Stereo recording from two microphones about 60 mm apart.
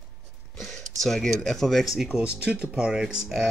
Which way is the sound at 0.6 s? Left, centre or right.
Centre.